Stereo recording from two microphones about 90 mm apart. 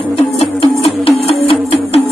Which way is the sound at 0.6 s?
90° left.